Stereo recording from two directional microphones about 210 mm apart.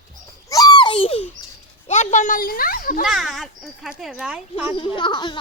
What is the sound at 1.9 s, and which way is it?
A child's voice, 35° left (ahead or behind).